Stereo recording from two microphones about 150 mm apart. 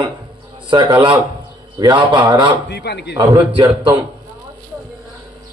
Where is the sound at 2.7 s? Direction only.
90° left.